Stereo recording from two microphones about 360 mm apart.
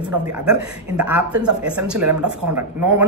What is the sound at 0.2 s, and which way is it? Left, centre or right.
Speech, centre.